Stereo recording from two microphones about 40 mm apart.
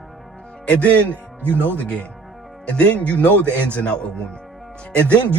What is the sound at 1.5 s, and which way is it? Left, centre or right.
Speech, left.